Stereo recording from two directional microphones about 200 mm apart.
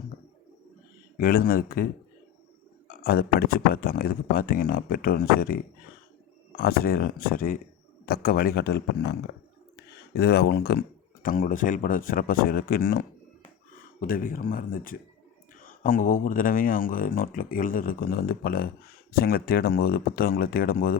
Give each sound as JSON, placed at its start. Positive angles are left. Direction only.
{"t": 1.2, "sound": "speech", "side_deg": 45}
{"t": 6.6, "sound": "speech", "side_deg": 50}
{"t": 10.2, "sound": "speech", "side_deg": 55}